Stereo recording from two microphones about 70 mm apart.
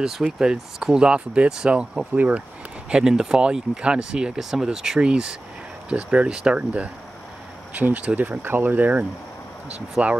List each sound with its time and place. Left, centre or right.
0.0 s speech: centre
8.4 s speech: right